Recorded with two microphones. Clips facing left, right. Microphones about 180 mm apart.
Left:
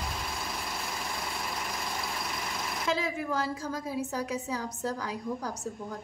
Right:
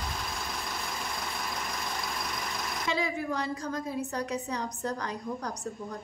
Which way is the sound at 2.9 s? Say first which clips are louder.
Even; centre (ahead or behind).